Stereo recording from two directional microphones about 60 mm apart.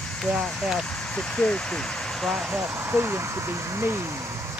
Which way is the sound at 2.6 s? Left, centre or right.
Right.